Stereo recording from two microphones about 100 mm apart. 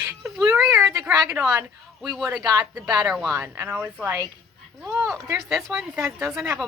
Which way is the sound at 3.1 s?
Centre (ahead or behind).